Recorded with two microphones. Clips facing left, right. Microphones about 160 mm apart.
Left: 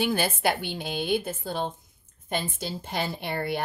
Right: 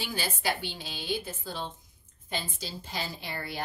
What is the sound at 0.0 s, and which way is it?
A woman's voice, 55° left (ahead or behind).